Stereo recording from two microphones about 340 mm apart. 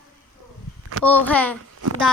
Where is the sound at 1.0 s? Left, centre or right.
Centre.